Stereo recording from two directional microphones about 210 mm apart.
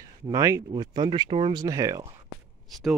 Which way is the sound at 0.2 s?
15° right (ahead or behind).